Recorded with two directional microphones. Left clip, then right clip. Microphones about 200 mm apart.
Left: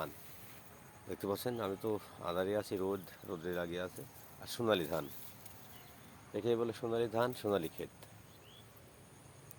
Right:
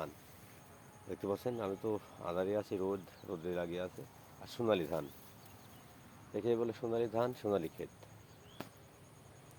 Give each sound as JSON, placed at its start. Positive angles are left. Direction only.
{"t": 1.1, "sound": "speech", "side_deg": 20}
{"t": 6.3, "sound": "speech", "side_deg": 20}